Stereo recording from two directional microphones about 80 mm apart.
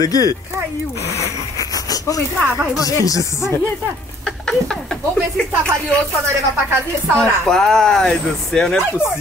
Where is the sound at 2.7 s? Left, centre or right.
Left.